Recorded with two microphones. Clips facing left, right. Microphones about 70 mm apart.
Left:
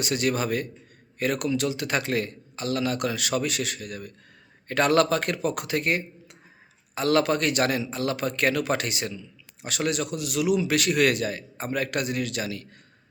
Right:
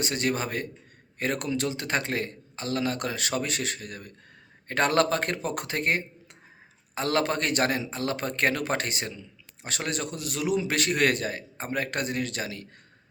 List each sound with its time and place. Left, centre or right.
0.0 s a man's voice: right